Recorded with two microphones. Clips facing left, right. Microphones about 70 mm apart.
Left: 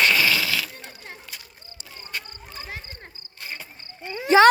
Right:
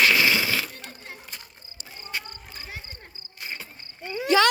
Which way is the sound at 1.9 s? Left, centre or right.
Right.